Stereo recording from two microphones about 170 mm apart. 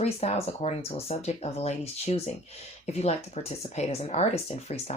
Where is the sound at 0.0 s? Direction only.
35° left (ahead or behind).